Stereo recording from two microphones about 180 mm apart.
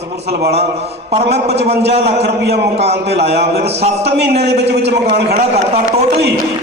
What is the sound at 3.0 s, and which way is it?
A man's voice, 70° right (ahead or behind).